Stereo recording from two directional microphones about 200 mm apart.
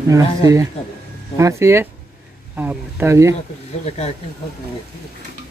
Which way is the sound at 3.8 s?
30° left (ahead or behind).